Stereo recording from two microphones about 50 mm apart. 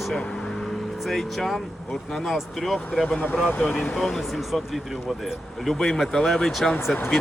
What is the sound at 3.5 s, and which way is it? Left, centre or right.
Speech, left.